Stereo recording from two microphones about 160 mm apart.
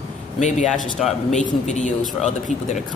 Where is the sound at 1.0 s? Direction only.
Centre (ahead or behind).